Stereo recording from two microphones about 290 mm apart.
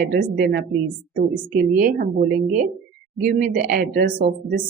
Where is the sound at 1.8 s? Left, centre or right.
Right.